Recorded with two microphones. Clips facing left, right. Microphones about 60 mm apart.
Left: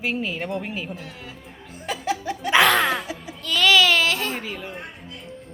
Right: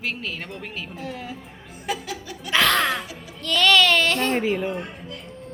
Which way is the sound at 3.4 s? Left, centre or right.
Centre.